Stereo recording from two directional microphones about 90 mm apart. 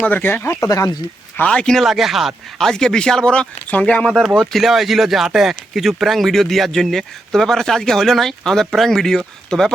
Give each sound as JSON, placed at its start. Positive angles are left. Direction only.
{"t": 0.0, "sound": "speech", "side_deg": 20}
{"t": 1.4, "sound": "a man's voice", "side_deg": 10}
{"t": 4.4, "sound": "speech", "side_deg": 0}